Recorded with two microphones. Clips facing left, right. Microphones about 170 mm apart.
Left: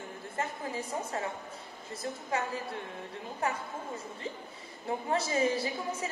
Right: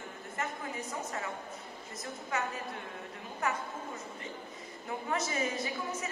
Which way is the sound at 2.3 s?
30° left (ahead or behind).